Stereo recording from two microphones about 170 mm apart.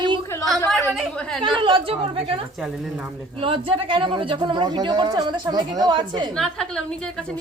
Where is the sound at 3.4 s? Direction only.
30° right (ahead or behind).